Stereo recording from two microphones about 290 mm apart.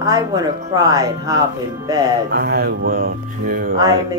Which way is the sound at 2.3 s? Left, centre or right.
Right.